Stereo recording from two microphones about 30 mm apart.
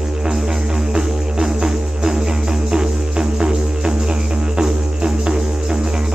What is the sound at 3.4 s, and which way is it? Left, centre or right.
Music, right.